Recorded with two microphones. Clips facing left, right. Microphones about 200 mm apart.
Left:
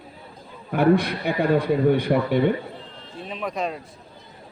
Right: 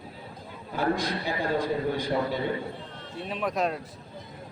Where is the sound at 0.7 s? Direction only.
65° left (ahead or behind).